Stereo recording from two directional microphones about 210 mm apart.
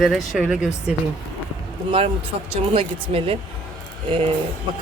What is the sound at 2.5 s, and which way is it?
Speech, 25° right (ahead or behind).